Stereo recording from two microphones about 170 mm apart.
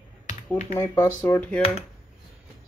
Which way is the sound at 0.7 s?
20° left (ahead or behind).